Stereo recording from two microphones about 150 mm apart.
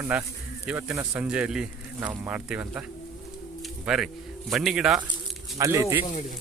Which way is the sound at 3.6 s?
5° right (ahead or behind).